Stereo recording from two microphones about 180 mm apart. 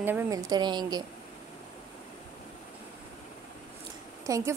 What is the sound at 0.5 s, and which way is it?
Speech, 25° right (ahead or behind).